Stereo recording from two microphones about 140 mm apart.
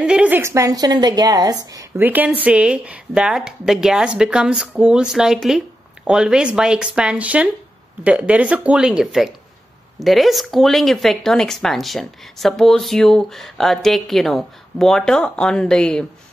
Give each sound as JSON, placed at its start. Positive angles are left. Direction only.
{"t": 0.0, "sound": "a woman's voice", "side_deg": -10}
{"t": 2.0, "sound": "speech", "side_deg": -10}